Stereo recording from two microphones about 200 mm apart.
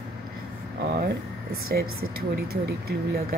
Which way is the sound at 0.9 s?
50° right (ahead or behind).